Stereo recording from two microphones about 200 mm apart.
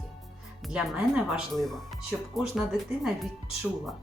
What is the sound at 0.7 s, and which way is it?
Speech, 5° right (ahead or behind).